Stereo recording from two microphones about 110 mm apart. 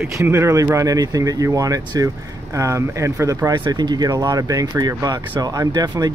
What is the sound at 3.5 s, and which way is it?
Speech, 40° right (ahead or behind).